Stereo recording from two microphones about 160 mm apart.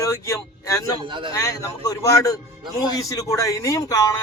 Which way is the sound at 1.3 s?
20° left (ahead or behind).